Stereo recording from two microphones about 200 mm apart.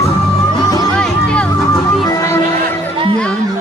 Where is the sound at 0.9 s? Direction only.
5° left (ahead or behind).